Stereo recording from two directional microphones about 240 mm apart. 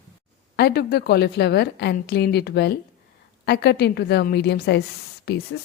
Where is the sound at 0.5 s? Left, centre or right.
Left.